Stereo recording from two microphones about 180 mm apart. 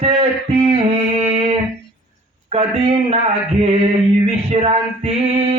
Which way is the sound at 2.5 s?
35° right (ahead or behind).